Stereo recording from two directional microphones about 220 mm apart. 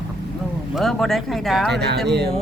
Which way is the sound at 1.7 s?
50° right (ahead or behind).